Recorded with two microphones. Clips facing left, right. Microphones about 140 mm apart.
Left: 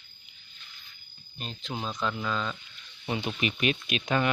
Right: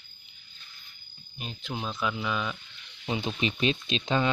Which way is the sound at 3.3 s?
25° right (ahead or behind).